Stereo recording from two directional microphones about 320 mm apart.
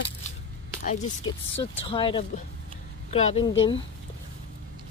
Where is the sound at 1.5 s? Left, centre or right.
Centre.